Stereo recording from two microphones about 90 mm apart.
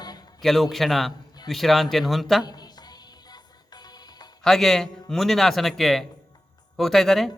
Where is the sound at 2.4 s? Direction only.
50° left (ahead or behind).